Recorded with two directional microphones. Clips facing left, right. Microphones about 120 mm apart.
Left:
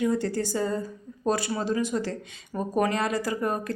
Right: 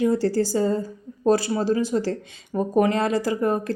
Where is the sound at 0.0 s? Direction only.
30° right (ahead or behind).